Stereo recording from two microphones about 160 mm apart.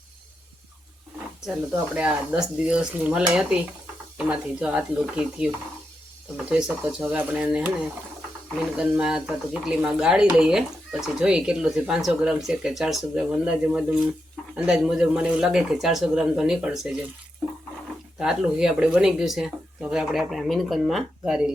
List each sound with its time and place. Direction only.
2.0 s speech: 5° right (ahead or behind)
8.8 s speech: 5° right (ahead or behind)
18.2 s speech: 5° right (ahead or behind)